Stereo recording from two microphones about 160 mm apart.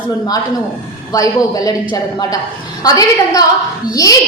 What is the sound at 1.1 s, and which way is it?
A woman's voice, 20° left (ahead or behind).